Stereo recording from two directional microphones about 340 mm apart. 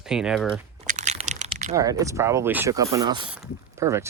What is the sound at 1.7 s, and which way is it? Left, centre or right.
Speech, centre.